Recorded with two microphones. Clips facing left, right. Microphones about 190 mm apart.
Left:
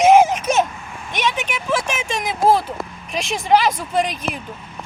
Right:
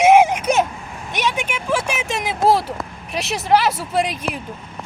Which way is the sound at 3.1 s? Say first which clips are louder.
Even; 5° right (ahead or behind).